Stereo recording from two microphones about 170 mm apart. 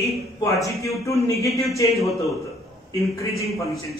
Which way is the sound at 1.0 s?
20° left (ahead or behind).